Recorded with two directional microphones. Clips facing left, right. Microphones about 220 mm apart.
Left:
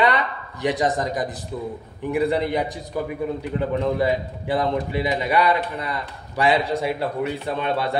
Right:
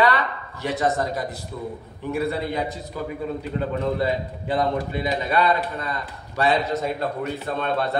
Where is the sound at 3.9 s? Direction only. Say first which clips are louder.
Left 2 dB; 15° left (ahead or behind).